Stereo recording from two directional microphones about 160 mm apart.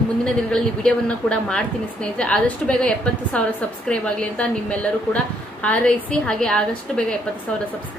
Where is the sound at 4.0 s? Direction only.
10° left (ahead or behind).